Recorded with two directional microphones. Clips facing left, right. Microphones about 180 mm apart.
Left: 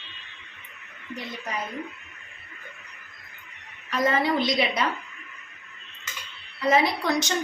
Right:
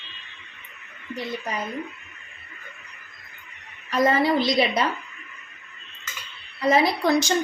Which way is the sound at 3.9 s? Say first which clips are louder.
Right 3 dB; 35° right (ahead or behind).